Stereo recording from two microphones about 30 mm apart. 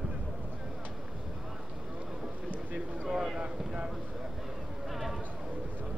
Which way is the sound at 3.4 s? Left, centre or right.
Right.